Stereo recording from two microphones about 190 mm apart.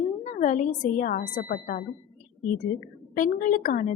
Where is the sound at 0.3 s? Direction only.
40° left (ahead or behind).